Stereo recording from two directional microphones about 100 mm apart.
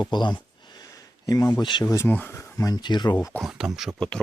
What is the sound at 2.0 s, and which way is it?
Speech, 20° left (ahead or behind).